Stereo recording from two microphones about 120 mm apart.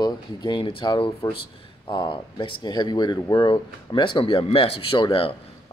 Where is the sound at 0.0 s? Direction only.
40° left (ahead or behind).